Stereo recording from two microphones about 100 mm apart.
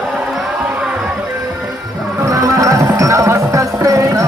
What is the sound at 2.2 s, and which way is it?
Music, 35° right (ahead or behind).